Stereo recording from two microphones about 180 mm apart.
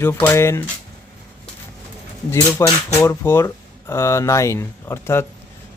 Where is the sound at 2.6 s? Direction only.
15° left (ahead or behind).